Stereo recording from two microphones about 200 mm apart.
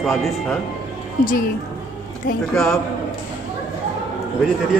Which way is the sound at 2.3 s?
45° left (ahead or behind).